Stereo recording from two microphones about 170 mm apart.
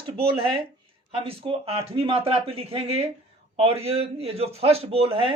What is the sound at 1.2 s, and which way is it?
A man's voice, 35° right (ahead or behind).